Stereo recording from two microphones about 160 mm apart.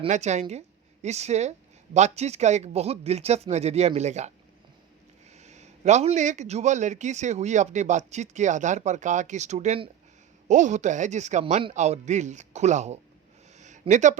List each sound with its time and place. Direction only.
0.1 s a man's voice: 45° right (ahead or behind)
5.4 s a man's voice: 45° right (ahead or behind)
13.6 s a sound: 50° right (ahead or behind)